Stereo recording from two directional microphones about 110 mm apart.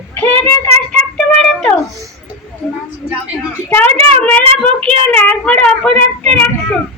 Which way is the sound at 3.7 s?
15° left (ahead or behind).